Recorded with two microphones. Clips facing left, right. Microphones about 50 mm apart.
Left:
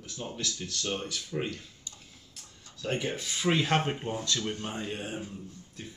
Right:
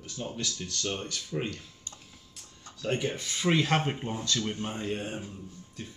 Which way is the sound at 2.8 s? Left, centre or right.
Centre.